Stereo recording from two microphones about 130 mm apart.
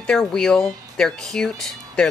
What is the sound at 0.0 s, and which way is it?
Speech, 5° left (ahead or behind).